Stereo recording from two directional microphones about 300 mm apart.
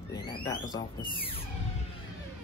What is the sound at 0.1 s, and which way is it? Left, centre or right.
Speech, centre.